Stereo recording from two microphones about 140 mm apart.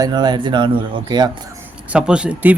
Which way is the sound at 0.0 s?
30° right (ahead or behind).